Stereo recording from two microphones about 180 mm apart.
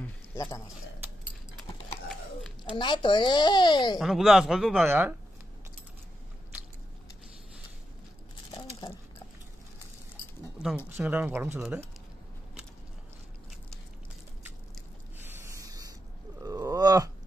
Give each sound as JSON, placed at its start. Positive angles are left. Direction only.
{"t": 0.0, "sound": "a sound", "side_deg": 15}
{"t": 2.7, "sound": "a child's voice", "side_deg": 25}
{"t": 4.0, "sound": "speech", "side_deg": 0}
{"t": 4.8, "sound": "speech", "side_deg": -10}
{"t": 11.0, "sound": "speech", "side_deg": -5}
{"t": 15.2, "sound": "a sound", "side_deg": -15}